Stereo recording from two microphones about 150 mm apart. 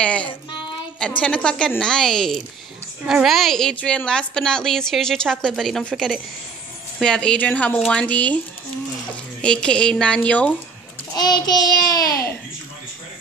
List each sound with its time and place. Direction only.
0.0 s a woman's voice: 10° left (ahead or behind)
9.4 s speech: 5° left (ahead or behind)
11.1 s child singing: 25° left (ahead or behind)